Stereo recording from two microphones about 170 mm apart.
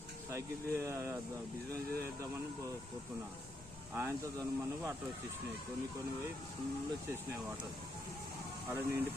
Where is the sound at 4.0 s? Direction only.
15° right (ahead or behind).